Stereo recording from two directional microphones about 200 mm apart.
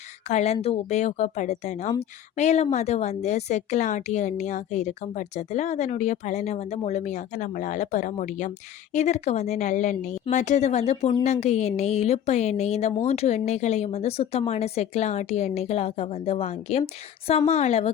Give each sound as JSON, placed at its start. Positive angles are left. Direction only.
{"t": 0.3, "sound": "a woman's voice", "side_deg": 35}